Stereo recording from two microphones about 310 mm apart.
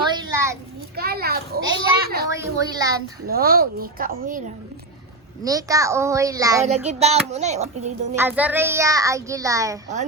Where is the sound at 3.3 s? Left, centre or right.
Right.